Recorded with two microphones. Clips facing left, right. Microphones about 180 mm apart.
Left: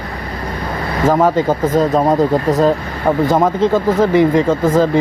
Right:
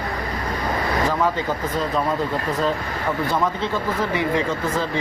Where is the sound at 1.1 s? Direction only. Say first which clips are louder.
Left 9 dB; 45° left (ahead or behind).